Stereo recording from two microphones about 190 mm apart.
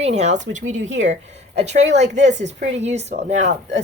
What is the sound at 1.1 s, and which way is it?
A woman's voice, 35° right (ahead or behind).